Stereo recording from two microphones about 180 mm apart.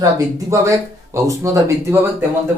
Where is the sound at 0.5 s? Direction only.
15° right (ahead or behind).